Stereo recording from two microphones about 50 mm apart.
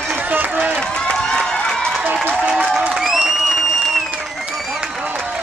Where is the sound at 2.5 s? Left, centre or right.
Centre.